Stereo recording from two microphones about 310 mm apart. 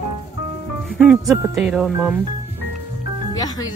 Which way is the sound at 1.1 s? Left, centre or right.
Centre.